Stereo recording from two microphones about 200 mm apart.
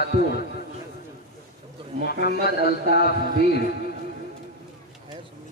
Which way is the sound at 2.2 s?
50° left (ahead or behind).